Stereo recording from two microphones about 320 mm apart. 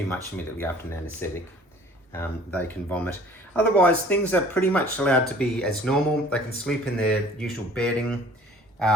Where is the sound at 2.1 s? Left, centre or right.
Centre.